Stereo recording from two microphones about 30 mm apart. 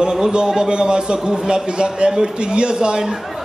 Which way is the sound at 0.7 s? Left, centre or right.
Right.